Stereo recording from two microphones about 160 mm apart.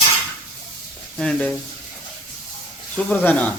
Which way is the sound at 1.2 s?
5° left (ahead or behind).